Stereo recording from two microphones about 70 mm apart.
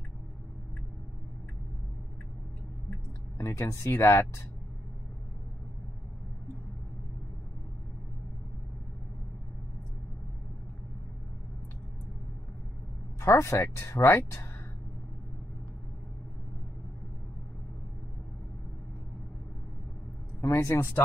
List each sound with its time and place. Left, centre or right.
3.3 s speech: left
13.2 s speech: left
20.3 s speech: left